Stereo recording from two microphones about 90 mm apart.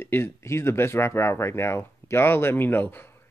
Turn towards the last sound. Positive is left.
turn(degrees=20)  # may be behind; listen again after turning